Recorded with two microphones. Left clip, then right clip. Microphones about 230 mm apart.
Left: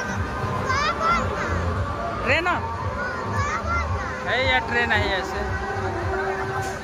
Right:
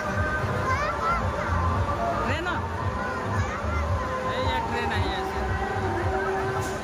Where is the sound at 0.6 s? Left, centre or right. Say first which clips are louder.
Left 5 dB; left.